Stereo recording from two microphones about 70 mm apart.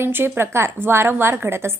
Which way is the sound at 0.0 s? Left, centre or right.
Right.